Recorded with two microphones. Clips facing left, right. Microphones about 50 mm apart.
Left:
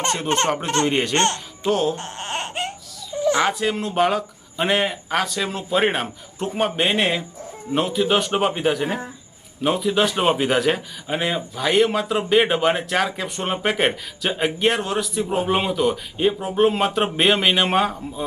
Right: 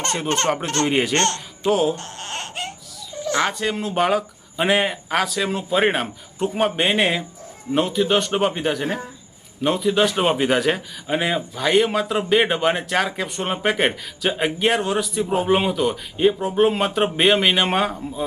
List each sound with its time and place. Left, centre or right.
0.3 s speech: centre
0.9 s speech: centre
1.1 s speech: centre
1.6 s speech: centre
2.0 s baby cry: centre
3.3 s speech: centre